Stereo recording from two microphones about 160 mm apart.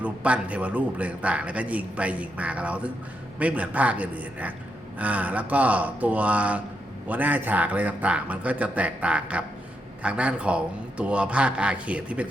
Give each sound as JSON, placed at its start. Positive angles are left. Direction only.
{"t": 0.0, "sound": "a man's voice", "side_deg": -10}